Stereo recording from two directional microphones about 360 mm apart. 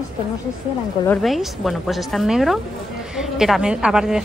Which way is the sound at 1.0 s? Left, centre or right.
Centre.